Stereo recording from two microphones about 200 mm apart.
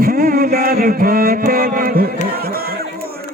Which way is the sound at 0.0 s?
50° right (ahead or behind).